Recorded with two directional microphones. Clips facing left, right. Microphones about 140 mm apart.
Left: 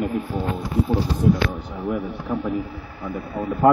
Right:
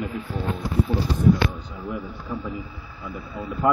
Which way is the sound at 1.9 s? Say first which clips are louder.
Left 6 dB; 80° left.